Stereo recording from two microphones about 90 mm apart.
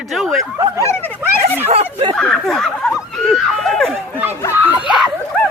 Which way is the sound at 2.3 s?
5° left (ahead or behind).